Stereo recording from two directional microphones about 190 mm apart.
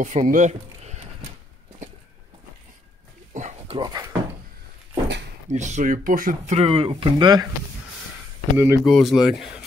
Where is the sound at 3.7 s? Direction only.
20° right (ahead or behind).